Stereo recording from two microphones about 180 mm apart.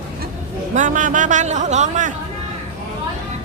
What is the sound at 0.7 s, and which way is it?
A woman's voice, 45° right (ahead or behind).